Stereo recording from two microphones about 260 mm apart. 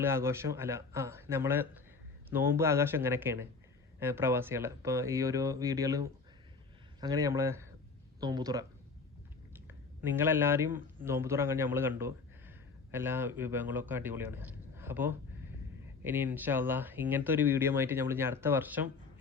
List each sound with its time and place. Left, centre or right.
0.0 s speech: centre